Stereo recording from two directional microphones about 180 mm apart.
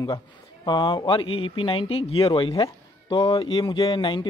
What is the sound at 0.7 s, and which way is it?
Speech, 25° left (ahead or behind).